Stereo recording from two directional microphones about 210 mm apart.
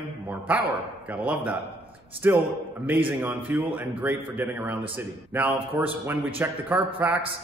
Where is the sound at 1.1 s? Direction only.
5° right (ahead or behind).